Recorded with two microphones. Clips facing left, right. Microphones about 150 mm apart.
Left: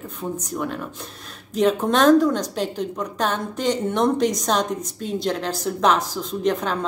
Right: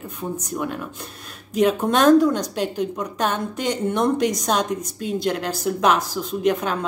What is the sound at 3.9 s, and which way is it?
A woman's voice, 5° right (ahead or behind).